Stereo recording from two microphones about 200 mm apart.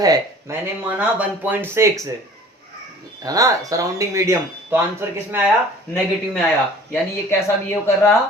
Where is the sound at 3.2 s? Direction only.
15° right (ahead or behind).